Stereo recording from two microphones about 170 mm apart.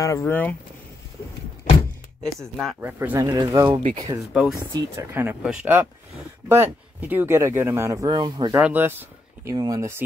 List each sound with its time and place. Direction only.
0.0 s speech: 15° left (ahead or behind)
2.4 s speech: centre (ahead or behind)
2.8 s speech: 10° right (ahead or behind)
4.3 s speech: 5° right (ahead or behind)
4.6 s speech: 20° right (ahead or behind)
8.5 s speech: 10° right (ahead or behind)